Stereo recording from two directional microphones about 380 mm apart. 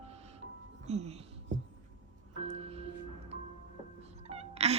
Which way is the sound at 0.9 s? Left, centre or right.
Centre.